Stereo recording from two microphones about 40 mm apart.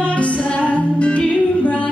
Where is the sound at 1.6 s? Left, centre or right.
Left.